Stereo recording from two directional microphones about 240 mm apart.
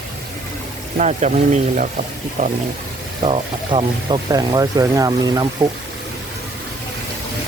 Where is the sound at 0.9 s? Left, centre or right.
Right.